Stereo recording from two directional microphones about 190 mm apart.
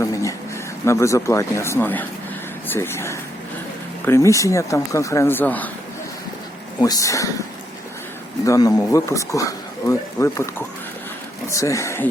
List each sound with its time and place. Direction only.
0.0 s a sound: 15° left (ahead or behind)
0.9 s speech: 15° left (ahead or behind)
6.7 s speech: 20° left (ahead or behind)
8.4 s speech: 20° left (ahead or behind)